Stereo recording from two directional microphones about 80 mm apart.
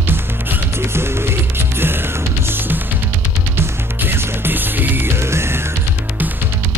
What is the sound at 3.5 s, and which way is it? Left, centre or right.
Music, right.